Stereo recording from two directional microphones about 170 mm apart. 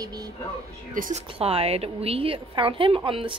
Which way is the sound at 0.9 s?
50° right (ahead or behind).